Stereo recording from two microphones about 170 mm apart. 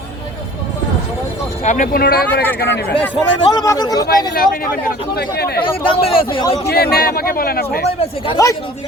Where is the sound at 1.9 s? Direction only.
60° left (ahead or behind).